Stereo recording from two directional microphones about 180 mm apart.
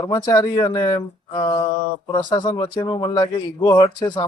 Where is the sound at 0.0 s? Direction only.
25° left (ahead or behind).